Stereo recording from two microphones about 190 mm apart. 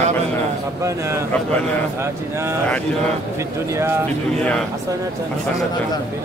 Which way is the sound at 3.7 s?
15° right (ahead or behind).